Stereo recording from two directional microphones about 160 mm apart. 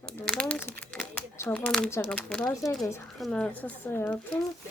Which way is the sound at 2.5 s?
20° left (ahead or behind).